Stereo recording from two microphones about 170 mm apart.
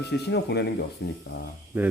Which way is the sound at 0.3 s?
75° left (ahead or behind).